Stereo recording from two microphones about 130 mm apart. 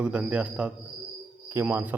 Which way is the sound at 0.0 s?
10° right (ahead or behind).